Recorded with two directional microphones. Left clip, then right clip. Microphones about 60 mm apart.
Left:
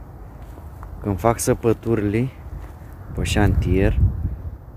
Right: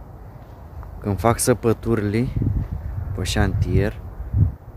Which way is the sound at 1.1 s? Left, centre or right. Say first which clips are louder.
Right 1 dB; centre.